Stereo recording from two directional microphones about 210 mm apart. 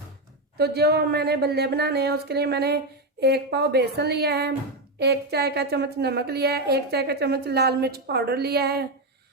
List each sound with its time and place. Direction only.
0.5 s a woman's voice: 50° right (ahead or behind)